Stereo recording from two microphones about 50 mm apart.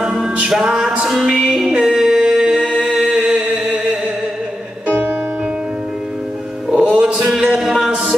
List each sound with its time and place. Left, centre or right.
0.0 s music: centre
2.5 s a capella: centre
3.1 s a sound: centre
4.8 s music: right
6.7 s music: centre
7.2 s music: centre